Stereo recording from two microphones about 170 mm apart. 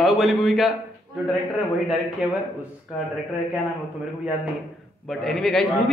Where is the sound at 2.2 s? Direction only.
5° right (ahead or behind).